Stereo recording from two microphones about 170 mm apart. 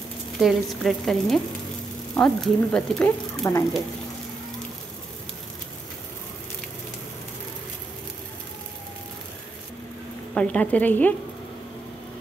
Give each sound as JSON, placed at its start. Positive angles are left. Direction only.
{"t": 0.4, "sound": "a woman's voice", "side_deg": 0}
{"t": 3.4, "sound": "a woman's voice", "side_deg": 15}
{"t": 10.3, "sound": "a woman's voice", "side_deg": 5}